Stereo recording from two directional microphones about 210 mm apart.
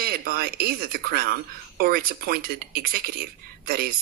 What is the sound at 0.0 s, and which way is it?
A woman's voice, 45° right (ahead or behind).